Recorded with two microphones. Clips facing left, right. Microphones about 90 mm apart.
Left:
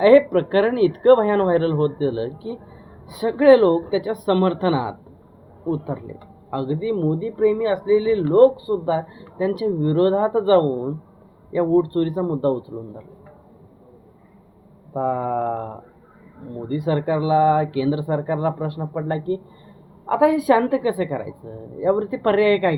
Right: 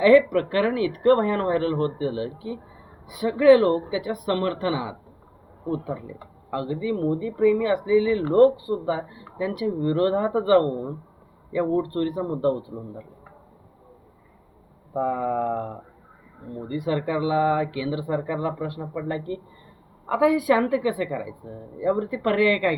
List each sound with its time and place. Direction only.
0.0 s a woman's voice: 35° left (ahead or behind)
5.6 s speech: 20° left (ahead or behind)
5.9 s speech: 35° left (ahead or behind)
14.9 s speech: 40° left (ahead or behind)